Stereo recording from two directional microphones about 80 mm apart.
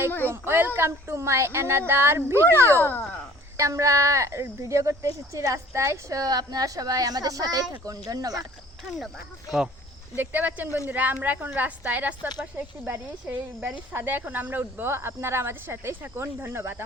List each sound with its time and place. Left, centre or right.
0.3 s speech: right
10.2 s a woman's voice: right